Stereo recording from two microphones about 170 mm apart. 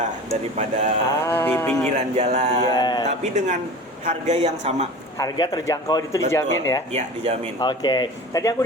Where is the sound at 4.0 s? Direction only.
45° right (ahead or behind).